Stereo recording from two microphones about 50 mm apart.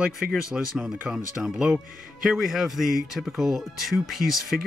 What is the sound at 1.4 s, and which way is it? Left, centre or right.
Speech, centre.